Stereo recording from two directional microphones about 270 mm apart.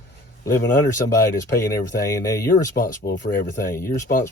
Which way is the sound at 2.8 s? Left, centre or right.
Left.